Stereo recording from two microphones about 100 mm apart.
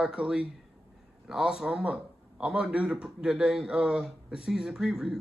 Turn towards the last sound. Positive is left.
turn(degrees=-5)  # may be behind; listen again after turning